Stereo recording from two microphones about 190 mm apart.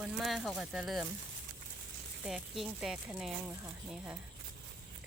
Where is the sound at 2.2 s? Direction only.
Centre (ahead or behind).